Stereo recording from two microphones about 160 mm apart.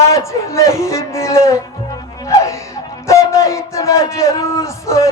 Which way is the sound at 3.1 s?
20° left (ahead or behind).